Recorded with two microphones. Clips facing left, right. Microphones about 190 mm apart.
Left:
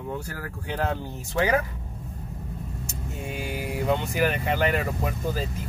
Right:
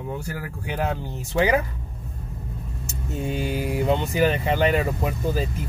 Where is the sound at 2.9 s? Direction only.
25° right (ahead or behind).